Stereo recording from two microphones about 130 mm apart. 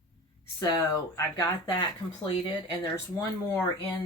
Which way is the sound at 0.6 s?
25° left (ahead or behind).